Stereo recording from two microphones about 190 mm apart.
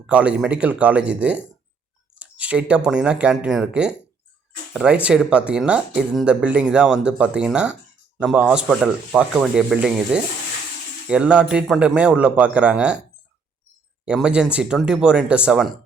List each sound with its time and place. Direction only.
0.1 s speech: 5° right (ahead or behind)
14.0 s speech: 5° right (ahead or behind)